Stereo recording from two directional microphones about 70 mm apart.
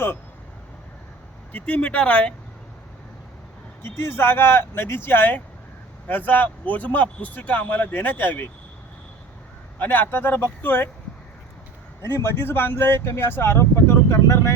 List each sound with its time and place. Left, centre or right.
1.5 s speech: centre
3.8 s speech: left
9.7 s speech: left
12.0 s speech: left